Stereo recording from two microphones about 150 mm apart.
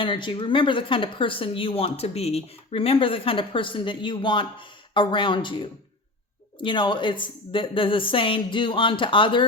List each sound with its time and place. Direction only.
0.0 s speech: 35° left (ahead or behind)